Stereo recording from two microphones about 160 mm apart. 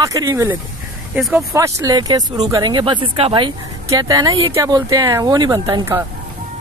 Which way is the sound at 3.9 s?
20° right (ahead or behind).